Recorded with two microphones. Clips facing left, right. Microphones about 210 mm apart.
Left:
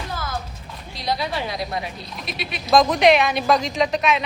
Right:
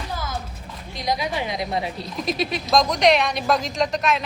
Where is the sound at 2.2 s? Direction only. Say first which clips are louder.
Right 8 dB; 40° right (ahead or behind).